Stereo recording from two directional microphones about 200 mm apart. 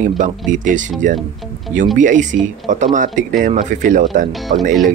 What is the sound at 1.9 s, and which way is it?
Speech, 40° right (ahead or behind).